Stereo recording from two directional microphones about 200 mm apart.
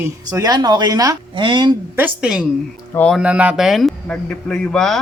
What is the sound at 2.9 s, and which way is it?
Speech, 5° left (ahead or behind).